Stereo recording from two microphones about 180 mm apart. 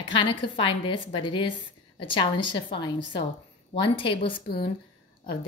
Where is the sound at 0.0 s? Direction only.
30° left (ahead or behind).